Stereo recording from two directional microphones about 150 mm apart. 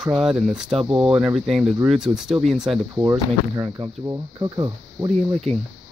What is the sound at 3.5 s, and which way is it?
Speech, 30° right (ahead or behind).